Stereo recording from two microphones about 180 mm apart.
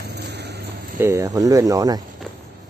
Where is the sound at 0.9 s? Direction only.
15° right (ahead or behind).